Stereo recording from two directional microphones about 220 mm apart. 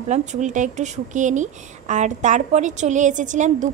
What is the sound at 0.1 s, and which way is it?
Speech, 30° right (ahead or behind).